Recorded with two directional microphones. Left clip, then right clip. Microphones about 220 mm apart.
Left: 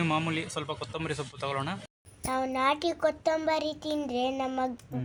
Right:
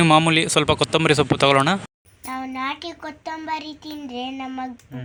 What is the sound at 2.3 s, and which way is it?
A child's voice, 50° left (ahead or behind).